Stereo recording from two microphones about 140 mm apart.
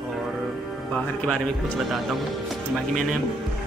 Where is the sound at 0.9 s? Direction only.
10° left (ahead or behind).